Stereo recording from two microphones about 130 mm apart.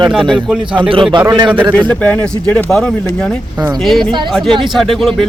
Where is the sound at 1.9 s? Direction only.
10° left (ahead or behind).